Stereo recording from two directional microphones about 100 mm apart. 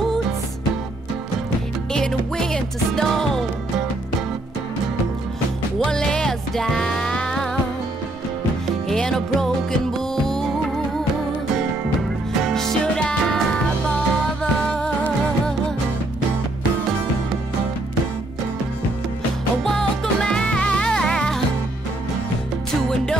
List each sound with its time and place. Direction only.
1.9 s music: 5° left (ahead or behind)
5.8 s music: 5° left (ahead or behind)
8.8 s music: 5° left (ahead or behind)
12.4 s music: 5° left (ahead or behind)
19.6 s music: 5° left (ahead or behind)